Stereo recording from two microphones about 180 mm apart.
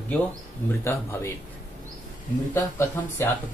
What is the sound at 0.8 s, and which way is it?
Speech, 15° left (ahead or behind).